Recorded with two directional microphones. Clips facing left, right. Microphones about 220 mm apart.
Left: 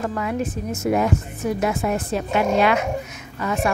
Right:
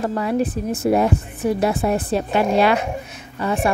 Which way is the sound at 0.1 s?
35° right (ahead or behind).